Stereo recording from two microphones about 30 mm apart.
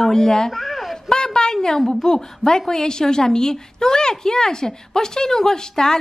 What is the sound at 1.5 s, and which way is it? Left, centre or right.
A woman's voice, centre.